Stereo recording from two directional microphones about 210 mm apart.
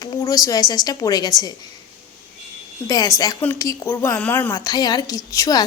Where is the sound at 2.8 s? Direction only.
15° left (ahead or behind).